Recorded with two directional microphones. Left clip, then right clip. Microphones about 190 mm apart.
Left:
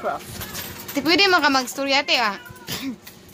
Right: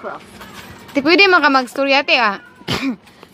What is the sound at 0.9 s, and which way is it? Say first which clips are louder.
Speech: right 6 dB; 25° right (ahead or behind).